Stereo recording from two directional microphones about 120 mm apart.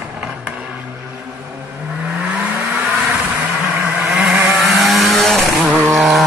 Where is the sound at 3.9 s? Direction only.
5° right (ahead or behind).